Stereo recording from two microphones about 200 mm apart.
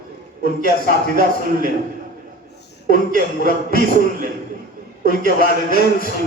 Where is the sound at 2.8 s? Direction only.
45° right (ahead or behind).